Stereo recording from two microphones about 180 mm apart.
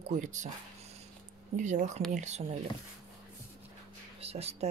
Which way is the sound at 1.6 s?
40° right (ahead or behind).